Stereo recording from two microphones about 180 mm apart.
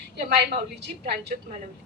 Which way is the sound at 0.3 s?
70° right (ahead or behind).